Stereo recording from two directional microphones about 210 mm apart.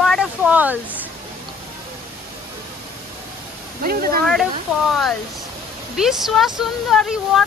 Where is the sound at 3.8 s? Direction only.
45° right (ahead or behind).